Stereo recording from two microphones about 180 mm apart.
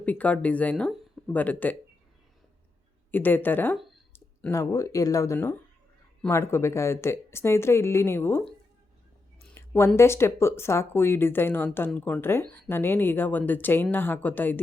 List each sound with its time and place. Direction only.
0.0 s speech: 10° left (ahead or behind)
3.1 s speech: 10° left (ahead or behind)
9.6 s speech: 15° left (ahead or behind)